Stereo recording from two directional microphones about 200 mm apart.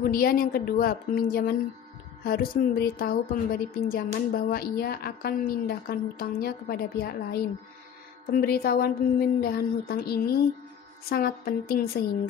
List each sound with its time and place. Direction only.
0.0 s a woman's voice: 45° left (ahead or behind)